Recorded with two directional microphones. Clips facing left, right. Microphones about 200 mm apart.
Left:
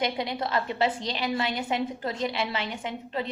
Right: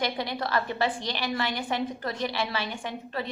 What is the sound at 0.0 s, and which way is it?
A woman's voice, 20° left (ahead or behind).